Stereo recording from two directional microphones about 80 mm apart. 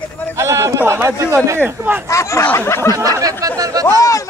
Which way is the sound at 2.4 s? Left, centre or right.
Left.